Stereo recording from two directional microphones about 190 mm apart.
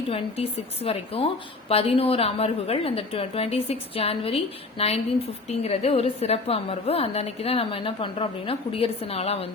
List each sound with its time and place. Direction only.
0.1 s a woman's voice: 30° left (ahead or behind)